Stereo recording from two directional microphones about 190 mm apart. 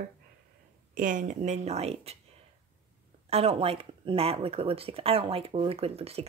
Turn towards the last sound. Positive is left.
turn(degrees=-30)  # may be behind; listen again after turning